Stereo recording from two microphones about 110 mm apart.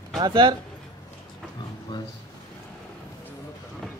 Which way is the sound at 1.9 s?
50° left (ahead or behind).